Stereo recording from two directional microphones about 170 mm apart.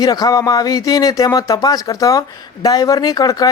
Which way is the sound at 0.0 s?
20° left (ahead or behind).